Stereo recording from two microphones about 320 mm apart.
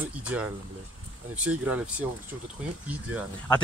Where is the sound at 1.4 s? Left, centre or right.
Centre.